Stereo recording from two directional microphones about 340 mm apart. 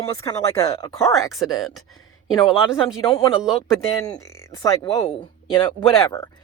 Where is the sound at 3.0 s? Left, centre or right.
Centre.